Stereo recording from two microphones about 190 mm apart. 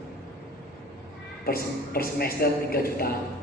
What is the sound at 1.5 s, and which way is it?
A man's voice, 50° left (ahead or behind).